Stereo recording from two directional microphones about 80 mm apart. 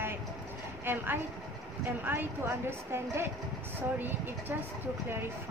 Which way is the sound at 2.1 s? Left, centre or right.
Right.